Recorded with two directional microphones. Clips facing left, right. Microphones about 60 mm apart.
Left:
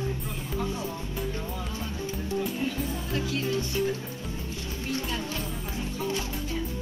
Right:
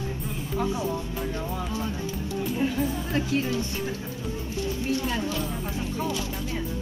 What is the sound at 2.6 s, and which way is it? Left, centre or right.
Music, right.